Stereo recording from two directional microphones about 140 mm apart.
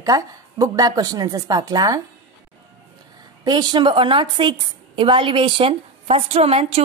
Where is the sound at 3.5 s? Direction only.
30° right (ahead or behind).